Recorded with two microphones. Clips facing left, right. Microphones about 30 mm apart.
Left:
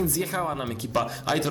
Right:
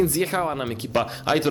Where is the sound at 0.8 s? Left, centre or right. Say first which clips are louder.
Right 3 dB; right.